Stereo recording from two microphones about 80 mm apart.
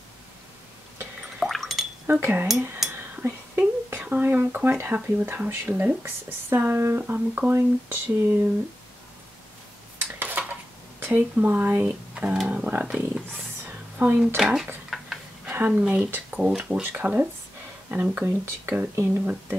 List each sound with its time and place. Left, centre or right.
1.4 s a sound: centre
2.0 s speech: right
2.9 s whispering: right
4.0 s speech: right
10.1 s dishes: right
11.0 s speech: right
13.7 s a sound: right
14.2 s speech: centre
14.9 s tick-tock: centre
15.5 s speech: right
16.3 s speech: centre
16.8 s speech: right